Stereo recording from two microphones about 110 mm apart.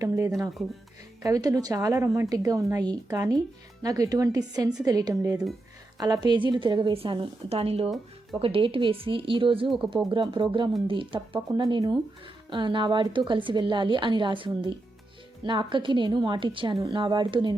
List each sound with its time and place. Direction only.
0.0 s a woman's voice: 30° right (ahead or behind)
6.9 s a woman's voice: 55° right (ahead or behind)
11.3 s a woman's voice: 40° right (ahead or behind)